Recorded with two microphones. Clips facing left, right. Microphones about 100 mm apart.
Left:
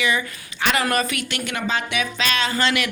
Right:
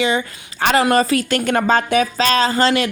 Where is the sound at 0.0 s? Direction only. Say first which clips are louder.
Right 4 dB; 30° right (ahead or behind).